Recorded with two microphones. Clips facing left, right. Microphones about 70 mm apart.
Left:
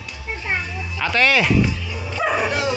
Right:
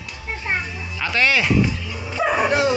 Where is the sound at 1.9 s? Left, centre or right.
Centre.